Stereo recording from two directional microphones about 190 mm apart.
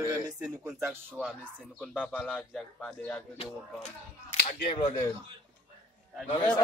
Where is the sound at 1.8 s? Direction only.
5° left (ahead or behind).